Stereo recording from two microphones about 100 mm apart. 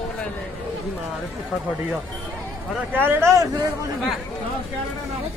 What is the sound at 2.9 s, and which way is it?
Speech, 25° right (ahead or behind).